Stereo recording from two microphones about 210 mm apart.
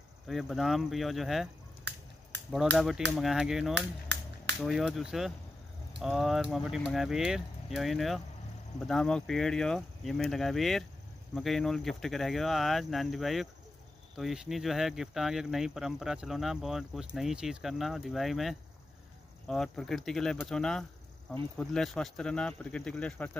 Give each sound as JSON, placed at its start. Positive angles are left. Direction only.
{"t": 0.3, "sound": "speech", "side_deg": 0}
{"t": 2.5, "sound": "speech", "side_deg": 0}
{"t": 3.7, "sound": "a sound", "side_deg": -55}
{"t": 4.6, "sound": "speech", "side_deg": 0}